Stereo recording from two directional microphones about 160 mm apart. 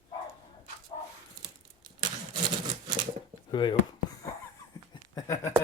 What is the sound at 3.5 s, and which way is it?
Speech, 30° left (ahead or behind).